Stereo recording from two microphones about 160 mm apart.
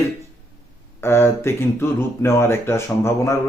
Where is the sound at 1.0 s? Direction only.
15° left (ahead or behind).